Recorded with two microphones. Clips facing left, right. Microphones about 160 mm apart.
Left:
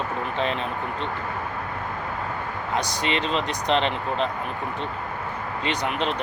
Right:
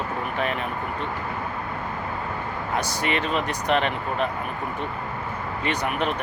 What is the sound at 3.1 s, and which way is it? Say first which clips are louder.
Speech: even; 25° left (ahead or behind).